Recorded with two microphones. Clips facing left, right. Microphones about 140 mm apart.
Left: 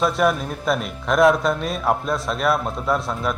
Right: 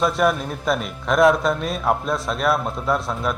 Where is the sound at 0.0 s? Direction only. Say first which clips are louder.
Even; centre (ahead or behind).